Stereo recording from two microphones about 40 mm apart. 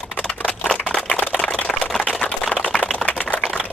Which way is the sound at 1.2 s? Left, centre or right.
Left.